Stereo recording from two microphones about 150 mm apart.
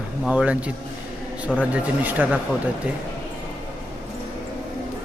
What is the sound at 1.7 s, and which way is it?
Speech, 10° right (ahead or behind).